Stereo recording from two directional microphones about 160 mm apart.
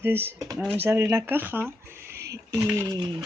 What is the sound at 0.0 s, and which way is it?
Speech, 15° right (ahead or behind).